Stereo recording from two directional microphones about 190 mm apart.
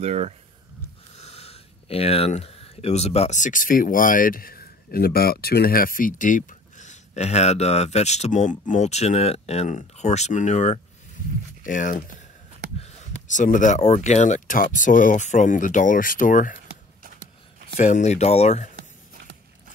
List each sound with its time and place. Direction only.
0.0 s speech: 35° right (ahead or behind)
1.1 s speech: 35° left (ahead or behind)
13.3 s speech: 40° left (ahead or behind)
17.7 s speech: 40° left (ahead or behind)